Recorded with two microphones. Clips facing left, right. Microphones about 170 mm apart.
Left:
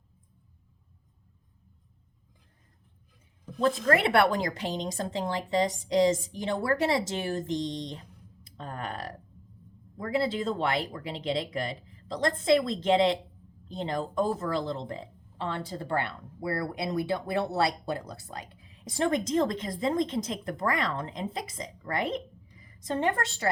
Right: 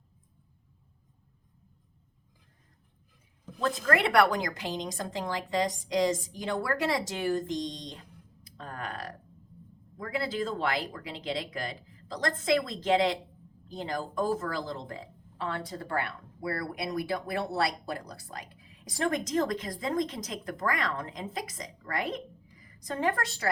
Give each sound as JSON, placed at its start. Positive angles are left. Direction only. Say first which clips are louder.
{"t": 3.8, "sound": "speech", "louder": "right 1 dB", "side_deg": 25}
{"t": 8.5, "sound": "a sound", "louder": "left 2 dB", "side_deg": 30}
{"t": 10.0, "sound": "speech", "louder": "left 3 dB", "side_deg": 25}